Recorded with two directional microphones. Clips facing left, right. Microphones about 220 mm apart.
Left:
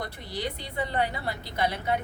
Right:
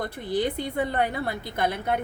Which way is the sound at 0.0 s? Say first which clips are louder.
Right 7 dB; 50° right (ahead or behind).